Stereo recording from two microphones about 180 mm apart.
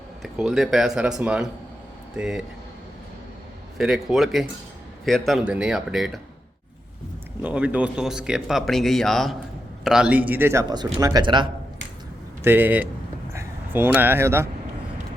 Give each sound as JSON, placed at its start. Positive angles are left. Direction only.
{"t": 0.2, "sound": "speech", "side_deg": 0}
{"t": 3.8, "sound": "speech", "side_deg": 0}
{"t": 7.4, "sound": "a man's voice", "side_deg": -5}
{"t": 12.4, "sound": "a man's voice", "side_deg": -10}